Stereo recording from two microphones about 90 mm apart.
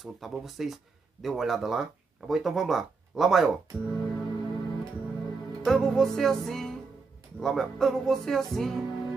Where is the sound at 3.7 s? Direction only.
20° right (ahead or behind).